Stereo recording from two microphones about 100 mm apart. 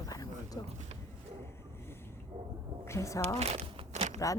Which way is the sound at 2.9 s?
30° left (ahead or behind).